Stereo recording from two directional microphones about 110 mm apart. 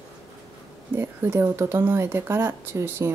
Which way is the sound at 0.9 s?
25° right (ahead or behind).